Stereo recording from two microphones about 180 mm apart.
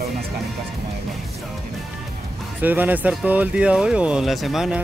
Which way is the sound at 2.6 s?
10° right (ahead or behind).